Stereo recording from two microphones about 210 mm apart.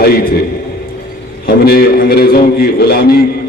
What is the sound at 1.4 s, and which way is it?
A man's voice, 45° left (ahead or behind).